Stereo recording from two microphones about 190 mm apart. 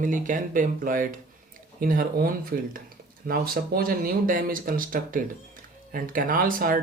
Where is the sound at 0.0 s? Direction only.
45° right (ahead or behind).